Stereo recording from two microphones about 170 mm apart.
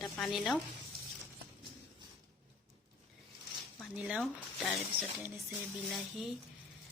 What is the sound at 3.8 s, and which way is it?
Speech, 5° right (ahead or behind).